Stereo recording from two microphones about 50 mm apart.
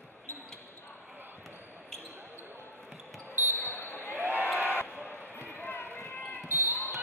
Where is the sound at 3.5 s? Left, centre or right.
Left.